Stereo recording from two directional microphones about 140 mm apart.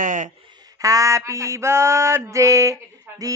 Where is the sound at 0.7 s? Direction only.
25° right (ahead or behind).